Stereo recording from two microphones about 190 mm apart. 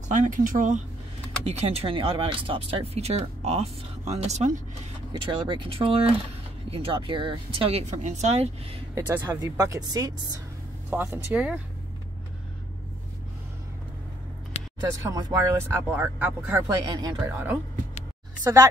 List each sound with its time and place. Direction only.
0.1 s speech: 40° right (ahead or behind)
1.4 s speech: 30° right (ahead or behind)
5.1 s speech: 25° right (ahead or behind)
8.9 s speech: 20° right (ahead or behind)
10.9 s speech: 10° right (ahead or behind)
14.5 s a sound: 35° left (ahead or behind)
14.9 s speech: 20° right (ahead or behind)